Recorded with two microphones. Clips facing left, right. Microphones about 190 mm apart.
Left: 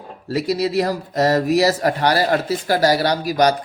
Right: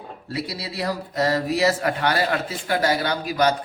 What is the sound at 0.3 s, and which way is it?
A man's voice, 45° left (ahead or behind).